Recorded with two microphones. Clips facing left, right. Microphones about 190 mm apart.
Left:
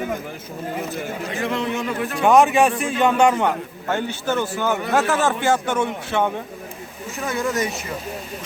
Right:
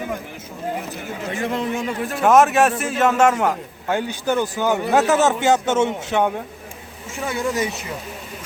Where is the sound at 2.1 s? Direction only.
Centre (ahead or behind); by 6.3 s 15° right (ahead or behind).